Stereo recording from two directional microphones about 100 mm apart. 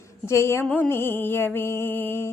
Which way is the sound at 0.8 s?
25° left (ahead or behind).